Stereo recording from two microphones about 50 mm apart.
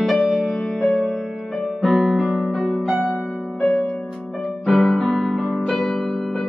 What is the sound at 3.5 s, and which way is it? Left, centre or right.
Music, left.